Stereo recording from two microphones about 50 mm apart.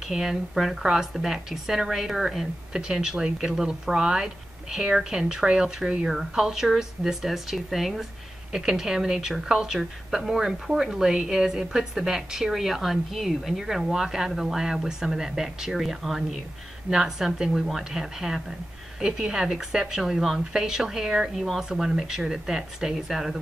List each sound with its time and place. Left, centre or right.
0.1 s speech: centre